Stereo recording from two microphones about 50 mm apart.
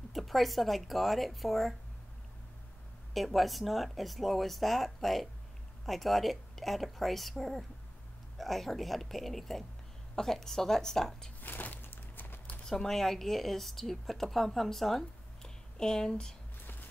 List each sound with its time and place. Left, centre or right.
0.1 s speech: centre
3.2 s a woman's voice: centre
11.4 s a sound: left
12.6 s speech: centre